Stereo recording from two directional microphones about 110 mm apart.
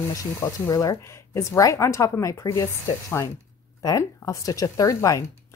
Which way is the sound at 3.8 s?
30° left (ahead or behind).